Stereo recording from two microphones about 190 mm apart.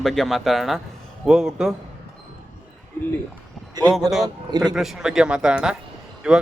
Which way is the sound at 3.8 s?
20° right (ahead or behind).